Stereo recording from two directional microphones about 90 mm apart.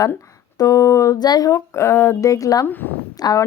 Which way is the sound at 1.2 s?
50° left (ahead or behind).